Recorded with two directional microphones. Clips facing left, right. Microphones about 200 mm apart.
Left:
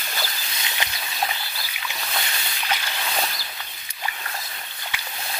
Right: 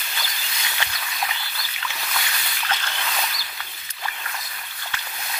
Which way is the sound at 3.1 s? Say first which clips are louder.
Left 4 dB; 35° left (ahead or behind).